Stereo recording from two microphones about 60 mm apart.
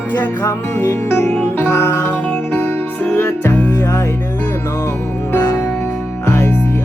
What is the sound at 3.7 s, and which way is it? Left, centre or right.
Music, left.